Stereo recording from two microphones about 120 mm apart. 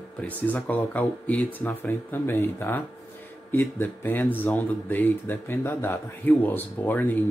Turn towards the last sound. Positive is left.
turn(degrees=15)  # may be behind; listen again after turning